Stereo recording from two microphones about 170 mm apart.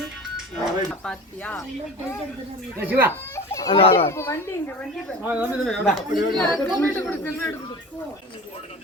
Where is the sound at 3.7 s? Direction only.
35° left (ahead or behind).